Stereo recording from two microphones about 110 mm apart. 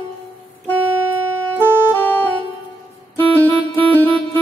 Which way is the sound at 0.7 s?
15° right (ahead or behind).